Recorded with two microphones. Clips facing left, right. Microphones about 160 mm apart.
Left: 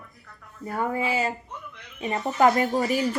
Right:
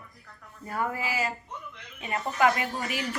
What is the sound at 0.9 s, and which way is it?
Speech, 25° left (ahead or behind).